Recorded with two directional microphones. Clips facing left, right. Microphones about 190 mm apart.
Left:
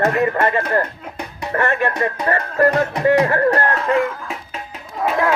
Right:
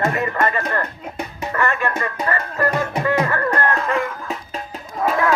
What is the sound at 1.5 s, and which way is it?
Speech, 40° left (ahead or behind).